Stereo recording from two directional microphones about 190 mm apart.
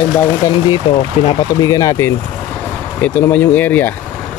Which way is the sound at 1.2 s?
30° left (ahead or behind).